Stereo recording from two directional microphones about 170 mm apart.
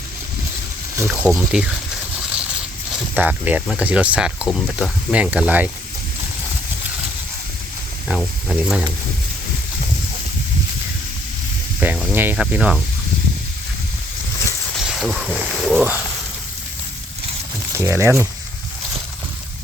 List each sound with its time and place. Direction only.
0.9 s speech: 10° right (ahead or behind)
3.2 s speech: 10° right (ahead or behind)
8.0 s speech: centre (ahead or behind)
11.8 s snake: 10° right (ahead or behind)
12.1 s speech: 10° right (ahead or behind)
14.8 s speech: centre (ahead or behind)
17.7 s speech: 15° right (ahead or behind)